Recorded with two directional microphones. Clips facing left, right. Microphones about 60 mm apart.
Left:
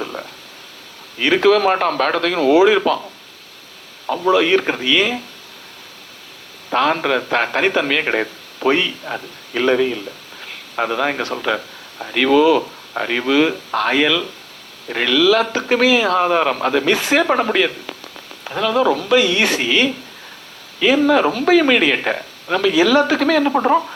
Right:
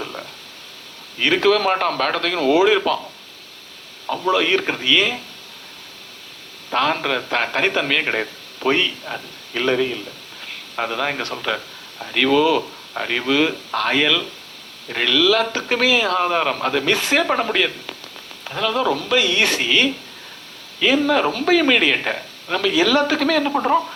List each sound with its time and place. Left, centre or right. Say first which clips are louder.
0.0 s a sound: left 3 dB; left
1.2 s a man's voice: left 3 dB; left
4.0 s speech: left 4 dB; left
6.7 s a man's voice: left 3 dB; left
10.8 s speech: left 4 dB; left
17.2 s a man's voice: left 4 dB; left